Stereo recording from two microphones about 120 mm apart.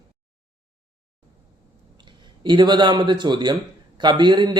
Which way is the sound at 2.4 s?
40° right (ahead or behind).